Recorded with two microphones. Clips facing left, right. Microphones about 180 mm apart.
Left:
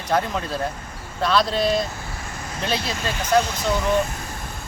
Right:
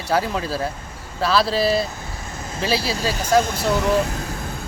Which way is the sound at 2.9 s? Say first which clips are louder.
Right 4 dB; 35° right (ahead or behind).